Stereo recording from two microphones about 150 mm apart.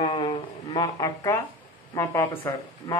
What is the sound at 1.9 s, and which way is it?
Speech, 15° left (ahead or behind).